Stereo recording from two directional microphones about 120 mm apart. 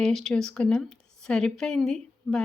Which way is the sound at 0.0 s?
Centre (ahead or behind).